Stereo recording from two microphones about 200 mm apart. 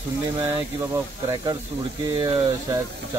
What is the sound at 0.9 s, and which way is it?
Speech, 20° right (ahead or behind).